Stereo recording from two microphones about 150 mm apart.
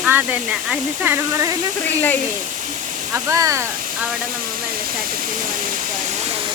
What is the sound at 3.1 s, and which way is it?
Speech, 20° right (ahead or behind).